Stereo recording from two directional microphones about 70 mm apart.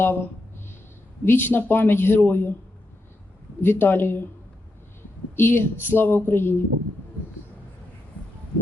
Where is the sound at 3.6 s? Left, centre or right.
Left.